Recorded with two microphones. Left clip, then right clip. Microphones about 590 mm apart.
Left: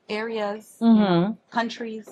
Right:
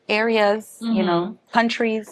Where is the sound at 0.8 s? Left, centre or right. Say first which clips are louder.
Left 1 dB; left.